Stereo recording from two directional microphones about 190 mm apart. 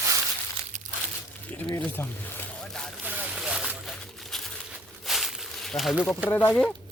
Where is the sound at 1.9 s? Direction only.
10° left (ahead or behind).